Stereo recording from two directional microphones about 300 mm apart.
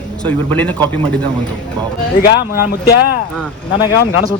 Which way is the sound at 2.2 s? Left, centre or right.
Left.